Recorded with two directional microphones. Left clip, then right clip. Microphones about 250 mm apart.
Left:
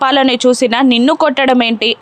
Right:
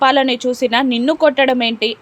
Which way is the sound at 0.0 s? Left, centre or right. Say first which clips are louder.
Left 3 dB; centre.